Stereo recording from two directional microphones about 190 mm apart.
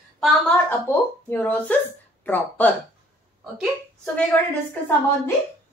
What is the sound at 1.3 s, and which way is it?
A woman's voice, 10° left (ahead or behind).